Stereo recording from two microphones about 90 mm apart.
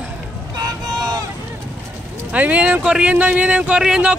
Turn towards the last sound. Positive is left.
turn(degrees=-10)  # may be behind; listen again after turning